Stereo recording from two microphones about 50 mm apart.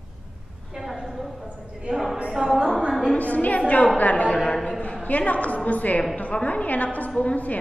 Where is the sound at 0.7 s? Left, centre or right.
Centre.